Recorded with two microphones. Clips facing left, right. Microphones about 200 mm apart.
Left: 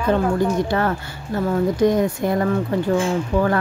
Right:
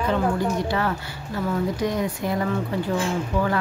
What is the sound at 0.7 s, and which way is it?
Speech, 50° left (ahead or behind).